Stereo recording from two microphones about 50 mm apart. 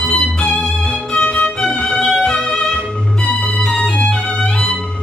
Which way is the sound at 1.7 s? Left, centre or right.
Centre.